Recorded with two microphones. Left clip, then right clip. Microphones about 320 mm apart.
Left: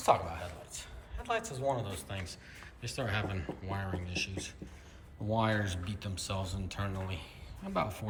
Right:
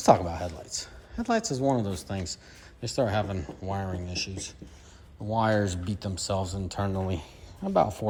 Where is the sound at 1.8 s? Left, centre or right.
Centre.